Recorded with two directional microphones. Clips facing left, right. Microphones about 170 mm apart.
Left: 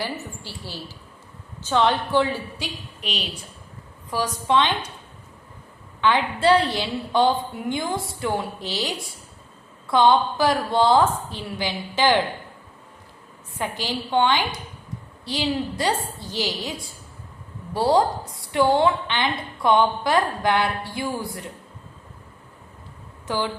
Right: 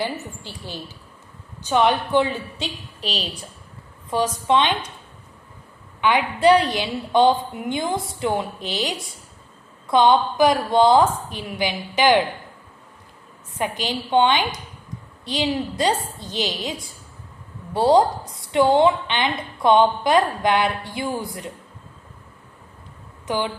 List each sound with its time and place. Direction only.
0.0 s a woman's voice: 20° right (ahead or behind)
3.0 s a woman's voice: 35° right (ahead or behind)
4.1 s a woman's voice: 20° right (ahead or behind)
6.0 s a woman's voice: 15° right (ahead or behind)
13.6 s a woman's voice: 20° right (ahead or behind)
17.7 s a woman's voice: 20° right (ahead or behind)
23.2 s speech: 20° right (ahead or behind)